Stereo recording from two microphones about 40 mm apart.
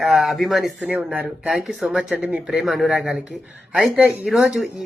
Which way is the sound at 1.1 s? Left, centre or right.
Right.